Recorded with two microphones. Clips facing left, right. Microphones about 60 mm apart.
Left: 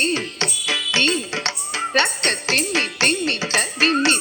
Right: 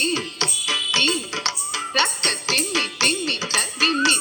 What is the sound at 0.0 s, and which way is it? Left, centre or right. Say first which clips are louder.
Music: left 2 dB; left.